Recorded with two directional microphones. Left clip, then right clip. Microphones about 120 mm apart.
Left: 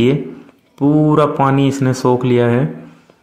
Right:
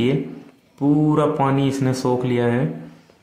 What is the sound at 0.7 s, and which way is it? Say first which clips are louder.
Speech: left 6 dB; 35° left (ahead or behind).